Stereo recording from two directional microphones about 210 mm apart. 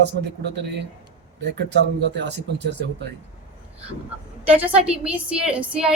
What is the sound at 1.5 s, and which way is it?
Speech, 55° right (ahead or behind).